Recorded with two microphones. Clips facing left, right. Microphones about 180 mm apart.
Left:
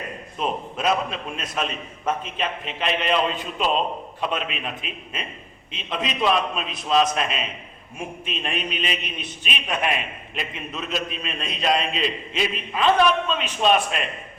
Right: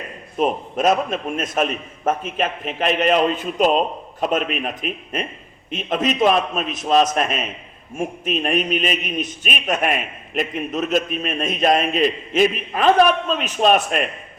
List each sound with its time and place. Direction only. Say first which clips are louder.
0.3 s a man's voice: right 7 dB; 45° right (ahead or behind)